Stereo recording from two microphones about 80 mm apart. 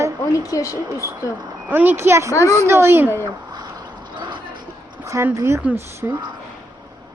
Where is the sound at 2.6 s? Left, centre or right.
Right.